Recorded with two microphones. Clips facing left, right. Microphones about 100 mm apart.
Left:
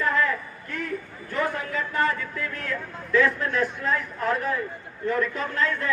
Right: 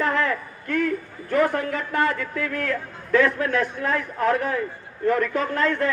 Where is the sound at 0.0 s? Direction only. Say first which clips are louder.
Right 1 dB; 65° right (ahead or behind).